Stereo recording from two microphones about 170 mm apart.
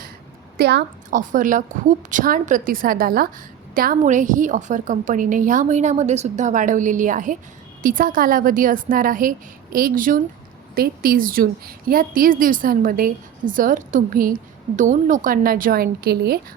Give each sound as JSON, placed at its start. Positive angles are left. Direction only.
{"t": 0.5, "sound": "a woman's voice", "side_deg": -75}
{"t": 1.1, "sound": "a woman's voice", "side_deg": -50}